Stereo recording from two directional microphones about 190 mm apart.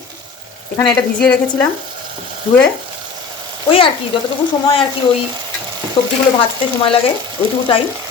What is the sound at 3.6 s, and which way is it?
Speech, 30° left (ahead or behind).